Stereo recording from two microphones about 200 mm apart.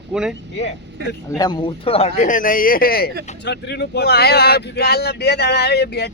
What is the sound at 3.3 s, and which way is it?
Speech, 60° left (ahead or behind).